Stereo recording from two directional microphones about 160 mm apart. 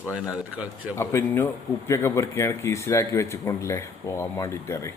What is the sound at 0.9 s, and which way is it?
Speech, 15° left (ahead or behind).